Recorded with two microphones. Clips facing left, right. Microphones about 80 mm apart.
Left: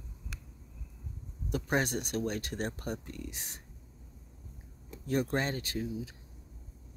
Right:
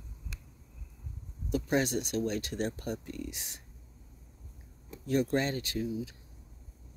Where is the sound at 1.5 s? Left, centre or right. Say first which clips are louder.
Right 2 dB; left.